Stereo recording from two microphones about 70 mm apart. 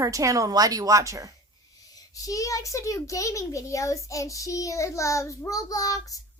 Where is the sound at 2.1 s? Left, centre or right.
Left.